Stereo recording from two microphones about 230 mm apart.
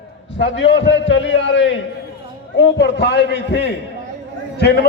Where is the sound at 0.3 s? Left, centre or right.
Left.